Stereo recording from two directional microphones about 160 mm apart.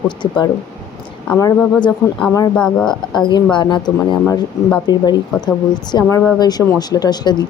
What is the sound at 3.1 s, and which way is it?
Speech, 30° left (ahead or behind).